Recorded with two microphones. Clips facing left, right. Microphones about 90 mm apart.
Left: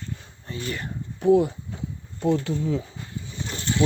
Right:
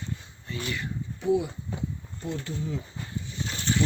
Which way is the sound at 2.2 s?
90° left.